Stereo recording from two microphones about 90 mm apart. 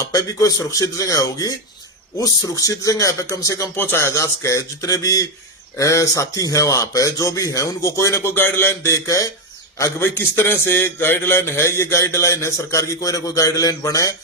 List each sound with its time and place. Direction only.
0.0 s a man's voice: 40° left (ahead or behind)
3.8 s a man's voice: 25° left (ahead or behind)
9.0 s a man's voice: 40° left (ahead or behind)